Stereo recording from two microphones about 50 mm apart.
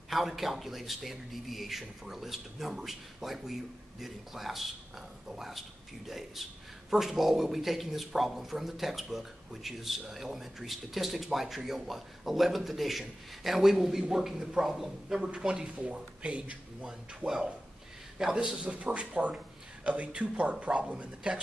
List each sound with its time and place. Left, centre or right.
0.1 s a man's voice: centre; by 16.5 s right
18.1 s a man's voice: centre